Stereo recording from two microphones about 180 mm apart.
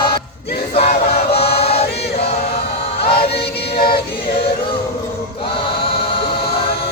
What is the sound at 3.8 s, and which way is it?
Choir, 60° left (ahead or behind).